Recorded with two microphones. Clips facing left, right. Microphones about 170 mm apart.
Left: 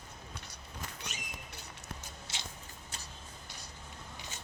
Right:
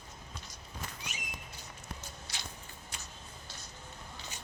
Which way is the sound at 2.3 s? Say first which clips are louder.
Left 1 dB; 25° left (ahead or behind).